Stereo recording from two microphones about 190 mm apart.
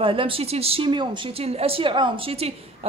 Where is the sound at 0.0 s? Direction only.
30° right (ahead or behind).